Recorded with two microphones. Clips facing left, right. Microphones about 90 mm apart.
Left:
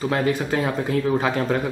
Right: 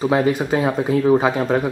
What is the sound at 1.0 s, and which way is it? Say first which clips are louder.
Speech: right 6 dB; 20° right (ahead or behind).